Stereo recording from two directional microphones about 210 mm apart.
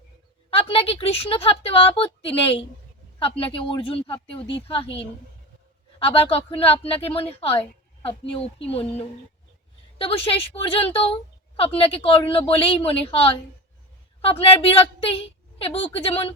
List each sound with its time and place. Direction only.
0.5 s a woman's voice: 25° left (ahead or behind)
10.0 s a woman's voice: 25° left (ahead or behind)